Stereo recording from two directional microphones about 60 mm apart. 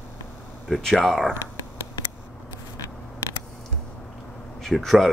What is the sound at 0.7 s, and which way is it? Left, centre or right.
Speech, centre.